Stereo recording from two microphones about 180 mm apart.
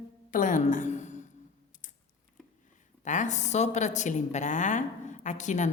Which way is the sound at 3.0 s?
40° left (ahead or behind).